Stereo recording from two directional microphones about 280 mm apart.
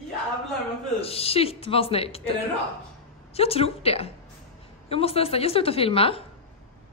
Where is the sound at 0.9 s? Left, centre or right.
Left.